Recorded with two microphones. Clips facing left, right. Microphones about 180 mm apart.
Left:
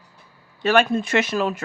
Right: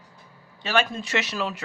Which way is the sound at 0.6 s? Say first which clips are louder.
Left 7 dB; 55° left (ahead or behind).